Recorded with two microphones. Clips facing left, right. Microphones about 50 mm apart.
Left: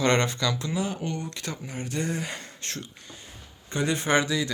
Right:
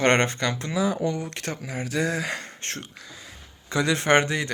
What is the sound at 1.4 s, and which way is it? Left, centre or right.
Speech, right.